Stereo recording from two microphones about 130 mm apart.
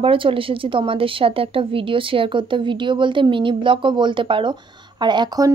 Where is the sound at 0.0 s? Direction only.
45° right (ahead or behind).